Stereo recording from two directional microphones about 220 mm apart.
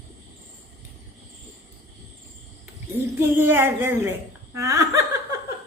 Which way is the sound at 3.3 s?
10° right (ahead or behind).